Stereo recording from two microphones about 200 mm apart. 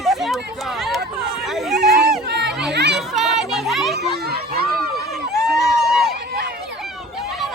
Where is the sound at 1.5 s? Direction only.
Centre (ahead or behind).